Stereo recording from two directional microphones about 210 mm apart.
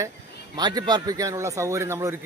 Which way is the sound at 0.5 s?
20° right (ahead or behind).